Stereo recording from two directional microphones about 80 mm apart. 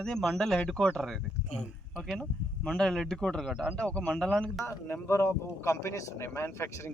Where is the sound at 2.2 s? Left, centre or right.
Centre.